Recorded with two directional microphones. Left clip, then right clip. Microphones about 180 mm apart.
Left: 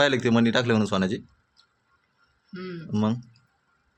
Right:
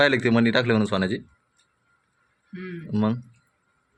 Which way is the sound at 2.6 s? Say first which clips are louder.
Right 1 dB; 5° right (ahead or behind).